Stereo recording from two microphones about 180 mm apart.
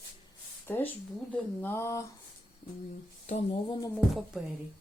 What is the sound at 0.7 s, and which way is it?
Speech, 10° left (ahead or behind).